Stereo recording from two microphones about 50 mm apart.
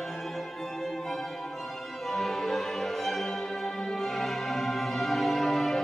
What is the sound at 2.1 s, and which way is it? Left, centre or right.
Music, centre.